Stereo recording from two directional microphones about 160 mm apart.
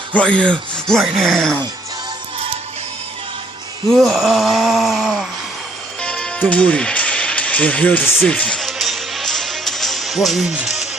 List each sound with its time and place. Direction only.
0.1 s speech: 5° left (ahead or behind)
3.8 s speech: centre (ahead or behind)
6.0 s music: 5° left (ahead or behind)